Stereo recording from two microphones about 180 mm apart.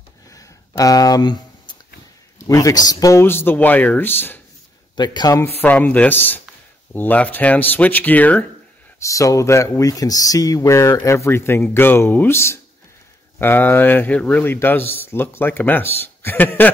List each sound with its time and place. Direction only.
0.3 s a sound: 20° left (ahead or behind)
2.4 s speech: 20° left (ahead or behind)
4.9 s speech: 25° left (ahead or behind)
5.6 s speech: 10° left (ahead or behind)